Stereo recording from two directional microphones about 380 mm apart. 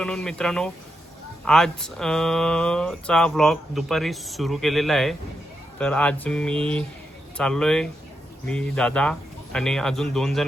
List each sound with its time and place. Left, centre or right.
0.0 s speech: centre